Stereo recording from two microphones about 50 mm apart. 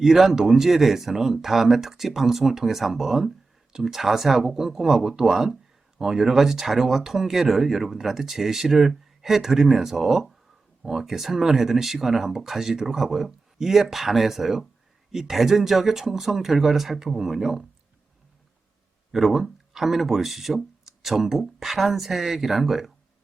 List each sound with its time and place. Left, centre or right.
0.0 s speech: centre
19.1 s speech: centre